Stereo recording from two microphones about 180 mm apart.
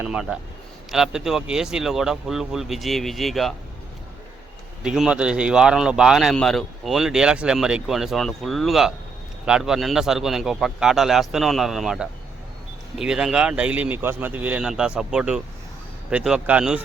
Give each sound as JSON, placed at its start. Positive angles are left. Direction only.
{"t": 0.0, "sound": "speech", "side_deg": -5}
{"t": 4.8, "sound": "speech", "side_deg": -5}